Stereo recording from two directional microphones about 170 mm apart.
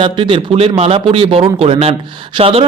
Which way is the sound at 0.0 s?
30° right (ahead or behind).